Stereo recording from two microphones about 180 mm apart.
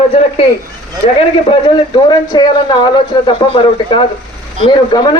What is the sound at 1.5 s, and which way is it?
Speech, 25° left (ahead or behind).